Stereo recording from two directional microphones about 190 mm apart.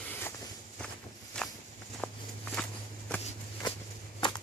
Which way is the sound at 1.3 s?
5° left (ahead or behind).